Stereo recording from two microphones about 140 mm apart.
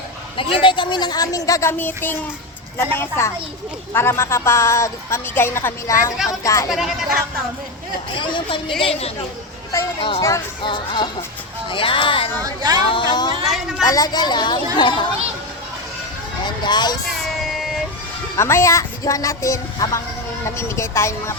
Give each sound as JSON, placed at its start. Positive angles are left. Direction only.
{"t": 0.3, "sound": "a woman's voice", "side_deg": 35}
{"t": 6.7, "sound": "a woman's voice", "side_deg": 0}
{"t": 8.2, "sound": "a woman's voice", "side_deg": 35}
{"t": 10.2, "sound": "a woman's voice", "side_deg": 20}
{"t": 10.6, "sound": "speech", "side_deg": 35}
{"t": 12.4, "sound": "speech", "side_deg": -30}
{"t": 12.8, "sound": "speech", "side_deg": 35}
{"t": 13.4, "sound": "a woman's voice", "side_deg": 0}
{"t": 13.8, "sound": "speech", "side_deg": 25}
{"t": 16.6, "sound": "speech", "side_deg": 30}
{"t": 17.1, "sound": "child singing", "side_deg": 0}
{"t": 18.3, "sound": "a woman's voice", "side_deg": 20}